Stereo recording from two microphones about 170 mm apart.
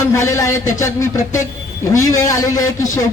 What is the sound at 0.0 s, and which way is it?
A man's voice, 15° left (ahead or behind).